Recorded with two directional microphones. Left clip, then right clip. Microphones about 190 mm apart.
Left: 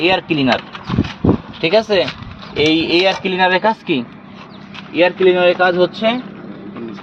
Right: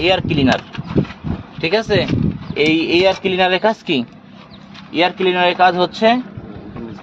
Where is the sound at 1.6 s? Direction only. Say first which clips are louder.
Left 2 dB; 10° right (ahead or behind).